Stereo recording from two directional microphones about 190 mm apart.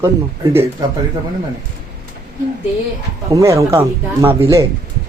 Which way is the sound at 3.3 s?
15° right (ahead or behind).